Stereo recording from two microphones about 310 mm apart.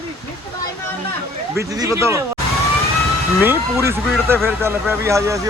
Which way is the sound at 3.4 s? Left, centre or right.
Centre.